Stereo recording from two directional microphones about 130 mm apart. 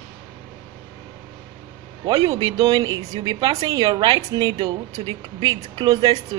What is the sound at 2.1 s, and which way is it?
A woman's voice, 35° right (ahead or behind).